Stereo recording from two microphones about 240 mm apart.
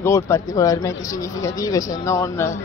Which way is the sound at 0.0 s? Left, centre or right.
Centre.